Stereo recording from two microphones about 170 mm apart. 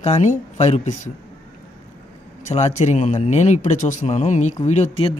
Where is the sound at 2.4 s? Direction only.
40° left (ahead or behind).